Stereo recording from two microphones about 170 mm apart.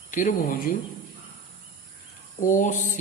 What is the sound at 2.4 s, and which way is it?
Speech, 50° left (ahead or behind).